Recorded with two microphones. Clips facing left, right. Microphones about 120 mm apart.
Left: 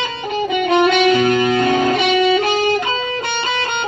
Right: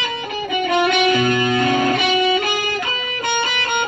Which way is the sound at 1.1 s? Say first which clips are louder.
Left 3 dB; 25° left (ahead or behind).